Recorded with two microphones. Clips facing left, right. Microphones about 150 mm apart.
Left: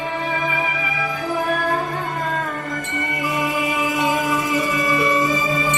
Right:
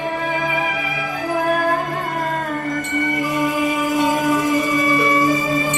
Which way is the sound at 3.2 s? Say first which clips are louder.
Right 1 dB; 45° right (ahead or behind).